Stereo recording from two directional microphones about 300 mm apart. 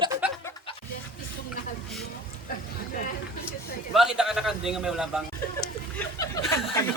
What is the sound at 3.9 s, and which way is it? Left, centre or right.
A man's voice, centre.